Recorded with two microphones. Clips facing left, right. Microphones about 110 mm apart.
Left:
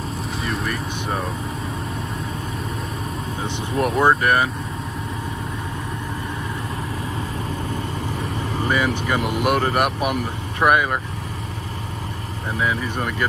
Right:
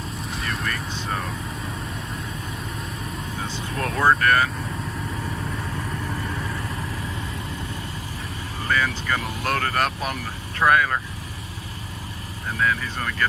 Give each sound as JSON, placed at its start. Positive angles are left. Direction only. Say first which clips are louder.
{"t": 0.4, "sound": "vehicle", "louder": "left 3 dB", "side_deg": 0}
{"t": 3.4, "sound": "speech", "louder": "left 8 dB", "side_deg": 20}
{"t": 8.6, "sound": "speech", "louder": "left 2 dB", "side_deg": 15}
{"t": 12.5, "sound": "speech", "louder": "left 1 dB", "side_deg": 15}